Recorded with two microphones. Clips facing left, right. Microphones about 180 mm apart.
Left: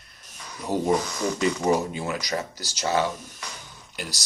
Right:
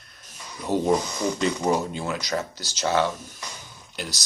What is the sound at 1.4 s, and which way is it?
Speech, 5° left (ahead or behind).